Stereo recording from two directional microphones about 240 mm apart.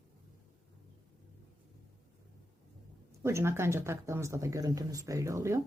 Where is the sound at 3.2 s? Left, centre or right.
Centre.